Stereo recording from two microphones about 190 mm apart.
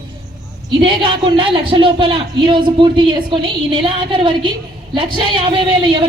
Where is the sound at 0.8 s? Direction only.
25° right (ahead or behind).